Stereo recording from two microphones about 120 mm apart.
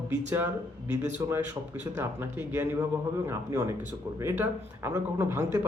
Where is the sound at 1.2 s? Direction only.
25° right (ahead or behind).